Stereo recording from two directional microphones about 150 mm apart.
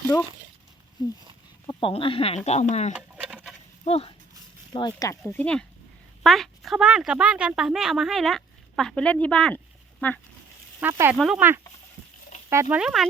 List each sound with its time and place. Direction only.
1.6 s speech: 35° left (ahead or behind)
2.9 s a sound: 5° right (ahead or behind)
3.8 s speech: 45° left (ahead or behind)
4.7 s a woman's voice: 30° left (ahead or behind); by 10.2 s 10° left (ahead or behind)
10.8 s speech: 15° right (ahead or behind)
11.1 s a woman's voice: 5° right (ahead or behind)
12.5 s speech: 20° right (ahead or behind)
12.8 s a woman's voice: centre (ahead or behind)